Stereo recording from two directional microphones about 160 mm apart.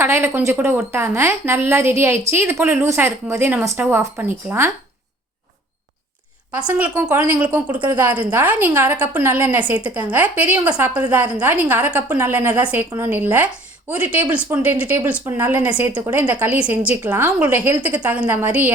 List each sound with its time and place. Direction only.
0.0 s a woman's voice: 15° right (ahead or behind)
6.7 s a woman's voice: 10° right (ahead or behind)